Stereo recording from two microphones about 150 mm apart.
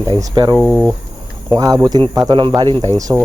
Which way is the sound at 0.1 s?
25° right (ahead or behind).